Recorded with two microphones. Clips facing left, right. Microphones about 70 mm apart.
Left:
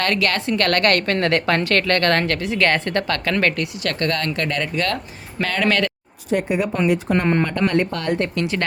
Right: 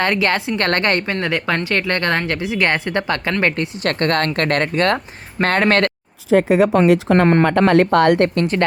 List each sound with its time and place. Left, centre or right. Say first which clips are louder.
0.0 s speech: right 3 dB; right
1.0 s speech: left 2 dB; centre
1.6 s a woman's voice: left 1 dB; centre; by 5.9 s right
6.5 s speech: right 6 dB; right
8.5 s speech: right 6 dB; right